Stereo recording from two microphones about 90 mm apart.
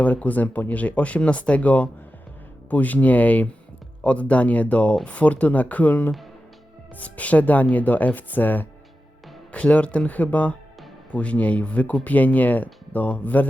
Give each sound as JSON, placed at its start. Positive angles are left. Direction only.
{"t": 0.0, "sound": "speech", "side_deg": 15}